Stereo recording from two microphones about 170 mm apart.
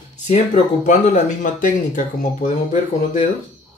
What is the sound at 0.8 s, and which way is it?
Speech, 45° left (ahead or behind).